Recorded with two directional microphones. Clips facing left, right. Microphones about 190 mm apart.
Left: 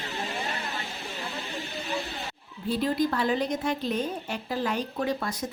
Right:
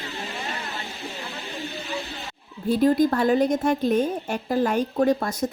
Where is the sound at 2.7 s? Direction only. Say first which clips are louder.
Right 7 dB; 45° right (ahead or behind).